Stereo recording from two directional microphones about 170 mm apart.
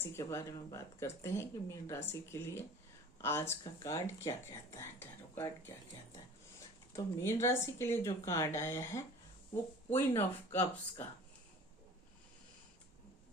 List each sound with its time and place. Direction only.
0.0 s speech: 15° left (ahead or behind)